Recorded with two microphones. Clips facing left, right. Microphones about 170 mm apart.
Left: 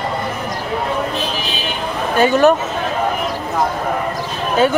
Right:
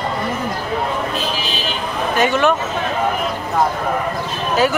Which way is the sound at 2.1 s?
35° left (ahead or behind).